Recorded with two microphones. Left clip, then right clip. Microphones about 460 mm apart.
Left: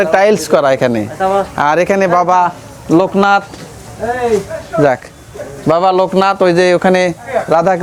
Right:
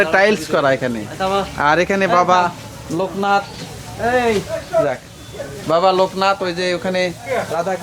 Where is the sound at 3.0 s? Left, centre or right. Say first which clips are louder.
Left 5 dB; left.